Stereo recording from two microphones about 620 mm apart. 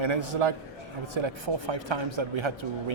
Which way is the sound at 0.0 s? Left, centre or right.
Right.